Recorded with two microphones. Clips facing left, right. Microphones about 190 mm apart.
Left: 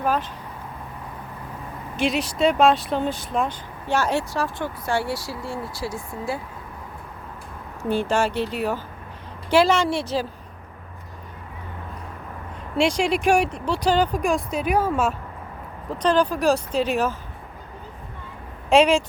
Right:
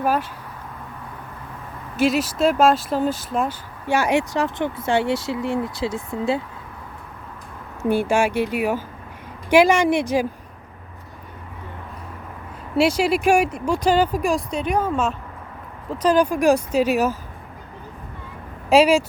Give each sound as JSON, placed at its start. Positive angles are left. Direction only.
{"t": 0.0, "sound": "a sound", "side_deg": -10}
{"t": 2.0, "sound": "speech", "side_deg": -5}
{"t": 7.9, "sound": "speech", "side_deg": -10}
{"t": 12.7, "sound": "speech", "side_deg": -5}
{"t": 15.9, "sound": "speech", "side_deg": -10}
{"t": 18.7, "sound": "speech", "side_deg": -5}